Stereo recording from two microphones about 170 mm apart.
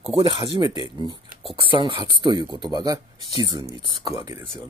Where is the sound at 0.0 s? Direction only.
35° right (ahead or behind).